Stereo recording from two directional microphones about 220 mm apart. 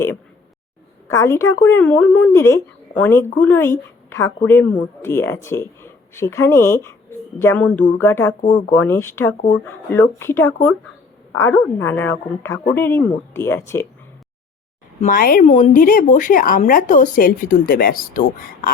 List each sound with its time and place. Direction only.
1.0 s a woman's voice: 15° left (ahead or behind)
15.0 s a woman's voice: 40° left (ahead or behind)